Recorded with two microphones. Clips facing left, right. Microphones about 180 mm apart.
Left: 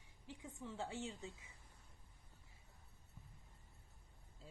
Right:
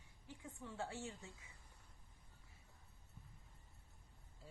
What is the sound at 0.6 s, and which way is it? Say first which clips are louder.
Speech: left 1 dB; 20° left (ahead or behind).